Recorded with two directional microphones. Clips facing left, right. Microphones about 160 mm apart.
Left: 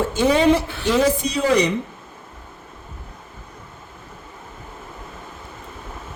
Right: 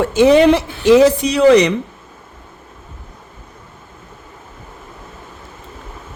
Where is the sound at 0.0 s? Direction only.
80° right.